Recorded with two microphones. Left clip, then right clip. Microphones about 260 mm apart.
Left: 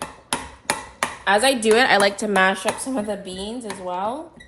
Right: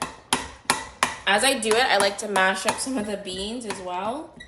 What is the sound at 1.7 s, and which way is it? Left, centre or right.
A woman's voice, left.